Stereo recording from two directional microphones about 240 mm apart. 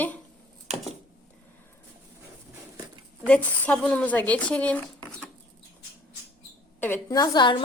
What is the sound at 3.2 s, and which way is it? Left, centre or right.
A woman's voice, centre.